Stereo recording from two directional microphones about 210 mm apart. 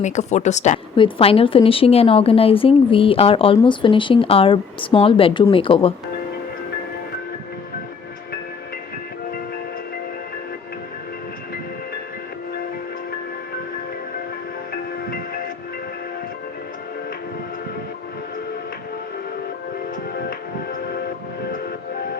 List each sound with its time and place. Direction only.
0.0 s a woman's voice: 35° left (ahead or behind)